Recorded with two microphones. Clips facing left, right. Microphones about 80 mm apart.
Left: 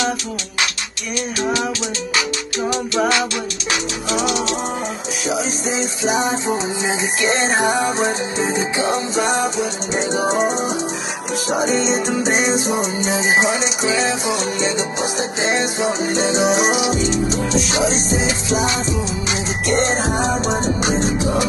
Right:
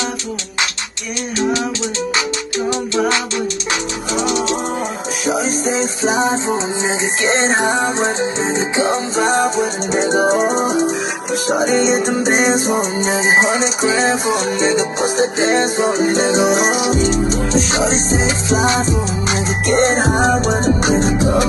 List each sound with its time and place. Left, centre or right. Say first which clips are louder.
5.3 s music: right 4 dB; right